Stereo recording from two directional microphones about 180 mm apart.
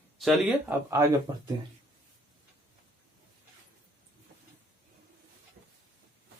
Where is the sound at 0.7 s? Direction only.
15° right (ahead or behind).